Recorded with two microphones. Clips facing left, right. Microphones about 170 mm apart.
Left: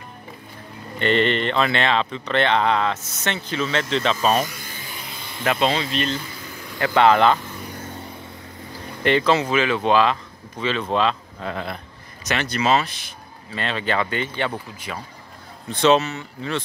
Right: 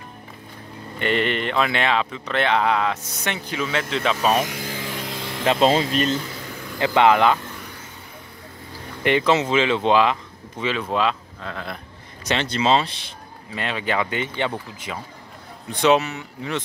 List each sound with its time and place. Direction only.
0.9 s speech: 10° right (ahead or behind)
4.5 s a sound: 90° right
5.4 s speech: 30° right (ahead or behind)
5.7 s speech: 45° right (ahead or behind)
6.8 s speech: 15° right (ahead or behind)
9.0 s speech: 15° right (ahead or behind)
12.3 s speech: 25° right (ahead or behind)
13.5 s speech: 15° right (ahead or behind)